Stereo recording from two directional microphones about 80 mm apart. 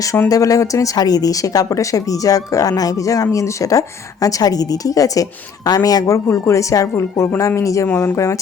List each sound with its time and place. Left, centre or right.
0.3 s speech: left
7.9 s speech: left
8.1 s speech: left